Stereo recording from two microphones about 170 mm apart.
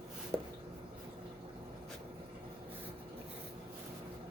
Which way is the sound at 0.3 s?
5° left (ahead or behind).